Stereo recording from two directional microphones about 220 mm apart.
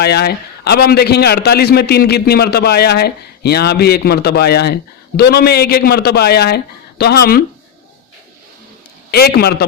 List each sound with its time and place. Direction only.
0.0 s a man's voice: 45° left (ahead or behind)
9.1 s a man's voice: 45° left (ahead or behind)